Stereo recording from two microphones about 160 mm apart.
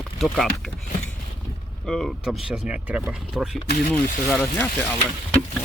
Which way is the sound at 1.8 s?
5° left (ahead or behind).